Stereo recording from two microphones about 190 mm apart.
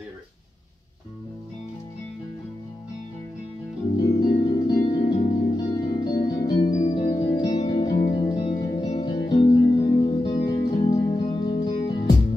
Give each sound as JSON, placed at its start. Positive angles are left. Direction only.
{"t": 3.9, "sound": "music", "side_deg": 20}
{"t": 6.5, "sound": "music", "side_deg": 35}